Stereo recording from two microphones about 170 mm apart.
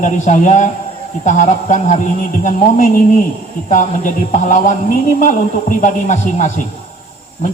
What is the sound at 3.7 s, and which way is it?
A man's voice, 50° left (ahead or behind).